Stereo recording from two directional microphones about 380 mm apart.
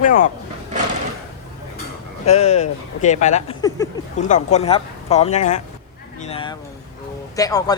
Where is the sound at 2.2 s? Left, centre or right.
Centre.